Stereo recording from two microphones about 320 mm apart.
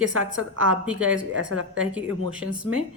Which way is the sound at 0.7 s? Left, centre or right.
Centre.